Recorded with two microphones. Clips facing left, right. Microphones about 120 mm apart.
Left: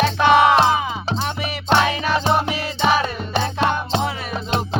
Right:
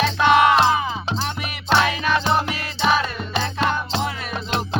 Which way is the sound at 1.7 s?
20° left (ahead or behind).